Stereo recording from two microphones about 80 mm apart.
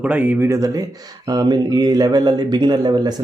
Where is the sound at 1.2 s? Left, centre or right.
Right.